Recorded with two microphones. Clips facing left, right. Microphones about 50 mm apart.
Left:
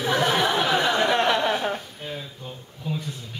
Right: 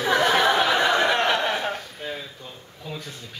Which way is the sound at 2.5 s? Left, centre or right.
Centre.